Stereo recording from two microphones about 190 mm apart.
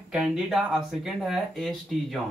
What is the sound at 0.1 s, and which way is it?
Speech, 5° right (ahead or behind).